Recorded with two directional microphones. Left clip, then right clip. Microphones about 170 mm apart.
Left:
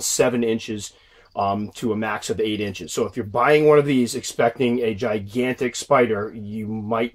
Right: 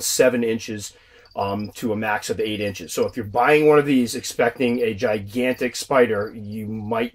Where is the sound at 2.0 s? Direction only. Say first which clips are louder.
Right 3 dB; 45° left (ahead or behind).